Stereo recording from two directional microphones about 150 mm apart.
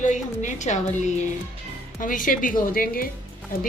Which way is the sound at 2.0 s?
65° left (ahead or behind).